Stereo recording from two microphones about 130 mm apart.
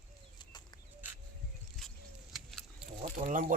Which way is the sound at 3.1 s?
80° right.